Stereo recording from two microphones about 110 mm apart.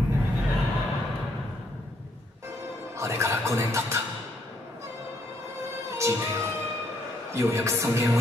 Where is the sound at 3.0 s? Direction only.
25° right (ahead or behind).